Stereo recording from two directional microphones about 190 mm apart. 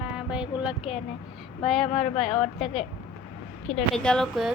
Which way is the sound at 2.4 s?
35° left (ahead or behind).